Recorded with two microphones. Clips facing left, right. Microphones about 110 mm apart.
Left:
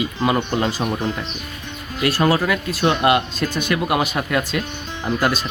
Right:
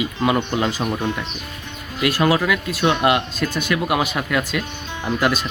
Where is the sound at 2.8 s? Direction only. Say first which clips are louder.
Left 1 dB; centre (ahead or behind).